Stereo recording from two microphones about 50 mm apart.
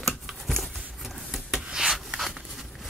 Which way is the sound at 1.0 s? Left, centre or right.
Centre.